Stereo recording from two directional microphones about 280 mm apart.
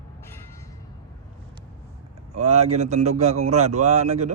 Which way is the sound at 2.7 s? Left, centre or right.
Right.